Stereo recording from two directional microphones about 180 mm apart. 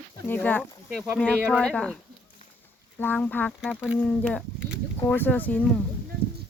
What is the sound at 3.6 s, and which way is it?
Speech, 5° right (ahead or behind).